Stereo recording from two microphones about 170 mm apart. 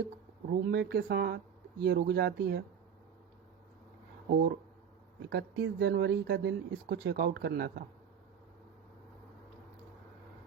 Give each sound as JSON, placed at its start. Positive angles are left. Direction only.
{"t": 0.7, "sound": "speech", "side_deg": -80}
{"t": 1.8, "sound": "speech", "side_deg": -90}
{"t": 4.3, "sound": "speech", "side_deg": -70}
{"t": 5.3, "sound": "speech", "side_deg": -85}